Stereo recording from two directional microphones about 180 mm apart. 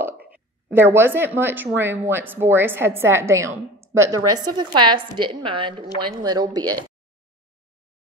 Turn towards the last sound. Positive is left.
turn(degrees=-20)  # may be behind; listen again after turning